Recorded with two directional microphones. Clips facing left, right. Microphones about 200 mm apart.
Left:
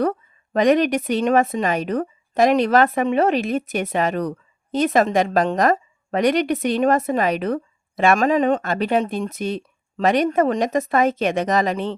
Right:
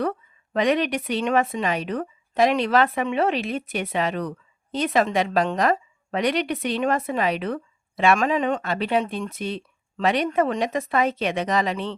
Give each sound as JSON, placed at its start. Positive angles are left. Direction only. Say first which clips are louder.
{"t": 0.0, "sound": "a woman's voice", "louder": "left 4 dB", "side_deg": 40}